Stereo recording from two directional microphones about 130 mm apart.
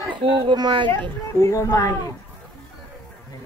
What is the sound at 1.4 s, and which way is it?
Speech, 25° left (ahead or behind).